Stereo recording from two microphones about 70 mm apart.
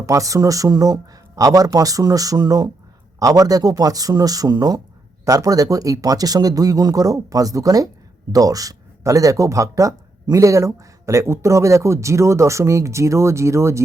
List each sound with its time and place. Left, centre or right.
0.0 s speech: right
5.2 s speech: right